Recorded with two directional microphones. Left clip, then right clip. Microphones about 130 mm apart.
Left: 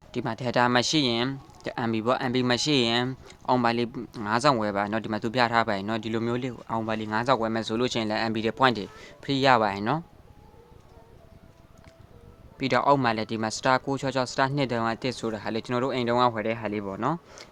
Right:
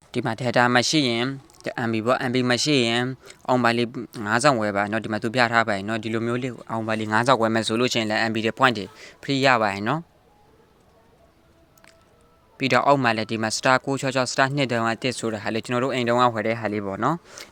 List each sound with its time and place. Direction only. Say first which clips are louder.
0.1 s speech: right 4 dB; 35° right (ahead or behind)
7.0 s speech: right 7 dB; 65° right (ahead or behind)
7.5 s speech: right 6 dB; 35° right (ahead or behind)
7.8 s speech: right 2 dB; 25° right (ahead or behind)
12.5 s speech: right 3 dB; 25° right (ahead or behind)
16.4 s speech: right 4 dB; 35° right (ahead or behind)